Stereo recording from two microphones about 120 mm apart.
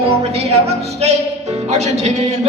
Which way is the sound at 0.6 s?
65° right (ahead or behind).